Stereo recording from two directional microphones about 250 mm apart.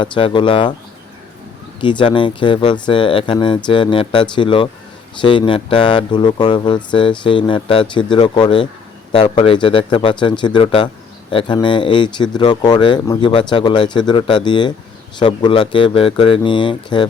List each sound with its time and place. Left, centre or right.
0.0 s speech: centre
1.8 s speech: centre